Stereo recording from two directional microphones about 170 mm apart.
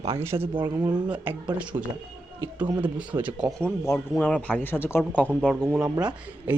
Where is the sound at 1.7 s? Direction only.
30° right (ahead or behind).